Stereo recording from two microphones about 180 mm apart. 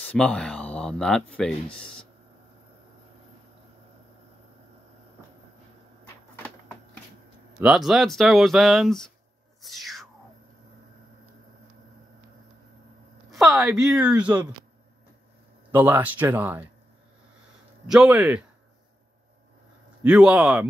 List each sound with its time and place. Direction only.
0.0 s speech: 5° left (ahead or behind)
7.6 s speech: 5° right (ahead or behind)
9.6 s music: centre (ahead or behind)
13.3 s a woman's voice: centre (ahead or behind)
15.7 s speech: 10° right (ahead or behind)
17.8 s speech: 5° right (ahead or behind)
20.0 s speech: 5° right (ahead or behind)